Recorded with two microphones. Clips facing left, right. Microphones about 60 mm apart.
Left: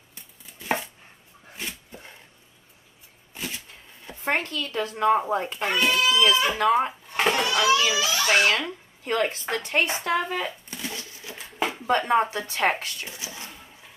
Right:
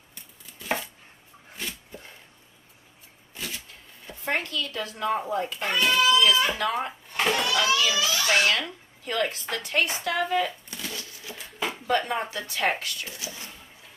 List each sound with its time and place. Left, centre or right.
0.6 s chopping: left
3.3 s a sound: left
4.2 s speech: left
5.6 s speech: centre
6.6 s speech: left
7.2 s a sound: centre
7.9 s speech: centre
8.2 s speech: left
13.1 s a sound: left